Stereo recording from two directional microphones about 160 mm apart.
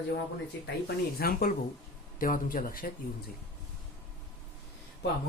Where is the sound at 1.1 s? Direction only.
75° left (ahead or behind).